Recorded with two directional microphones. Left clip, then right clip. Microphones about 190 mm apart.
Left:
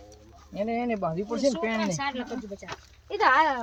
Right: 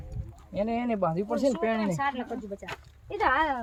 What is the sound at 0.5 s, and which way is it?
Speech, 60° right (ahead or behind).